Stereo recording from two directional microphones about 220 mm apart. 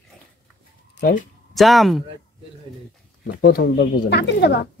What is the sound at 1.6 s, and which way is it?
Speech, centre (ahead or behind).